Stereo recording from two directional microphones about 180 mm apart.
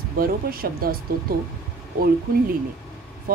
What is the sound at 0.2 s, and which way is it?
Speech, 55° right (ahead or behind).